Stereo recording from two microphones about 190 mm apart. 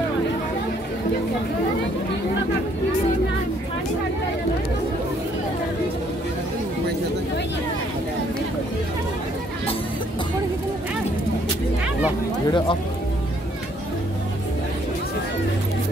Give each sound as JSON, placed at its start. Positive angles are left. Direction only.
{"t": 12.4, "sound": "speech", "side_deg": 25}